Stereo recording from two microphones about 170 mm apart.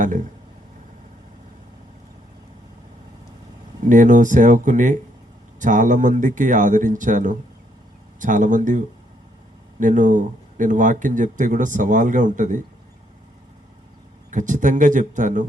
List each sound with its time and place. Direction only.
3.8 s speech: 50° right (ahead or behind)
9.8 s speech: 50° right (ahead or behind)
14.3 s speech: 50° right (ahead or behind)